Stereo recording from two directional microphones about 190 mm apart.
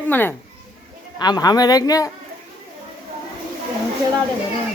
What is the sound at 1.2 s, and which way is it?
Speech, 20° left (ahead or behind).